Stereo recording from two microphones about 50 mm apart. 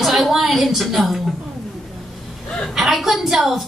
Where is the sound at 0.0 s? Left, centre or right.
Centre.